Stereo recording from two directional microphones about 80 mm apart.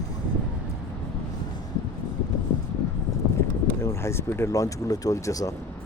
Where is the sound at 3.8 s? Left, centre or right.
Left.